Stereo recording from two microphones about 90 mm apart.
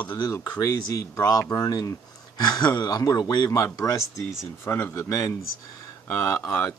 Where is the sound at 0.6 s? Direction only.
35° left (ahead or behind).